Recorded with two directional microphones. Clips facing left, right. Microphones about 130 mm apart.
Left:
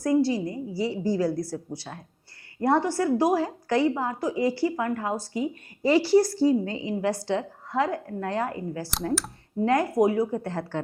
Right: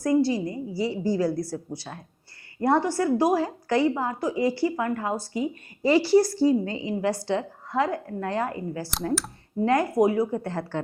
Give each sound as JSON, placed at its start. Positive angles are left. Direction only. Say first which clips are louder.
{"t": 0.0, "sound": "a woman's voice", "louder": "right 1 dB", "side_deg": -10}
{"t": 2.6, "sound": "a woman's voice", "louder": "right 1 dB", "side_deg": -15}
{"t": 8.9, "sound": "speech", "louder": "even", "side_deg": 0}
{"t": 9.6, "sound": "a woman's voice", "louder": "right 1 dB", "side_deg": -15}